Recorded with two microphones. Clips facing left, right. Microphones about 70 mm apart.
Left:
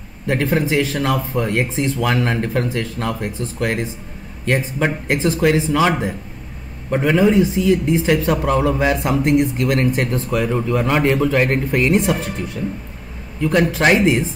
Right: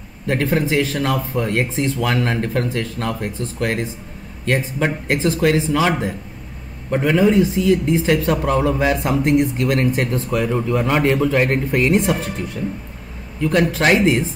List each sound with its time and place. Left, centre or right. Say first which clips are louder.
0.3 s speech: even; centre
13.4 s speech: left 1 dB; centre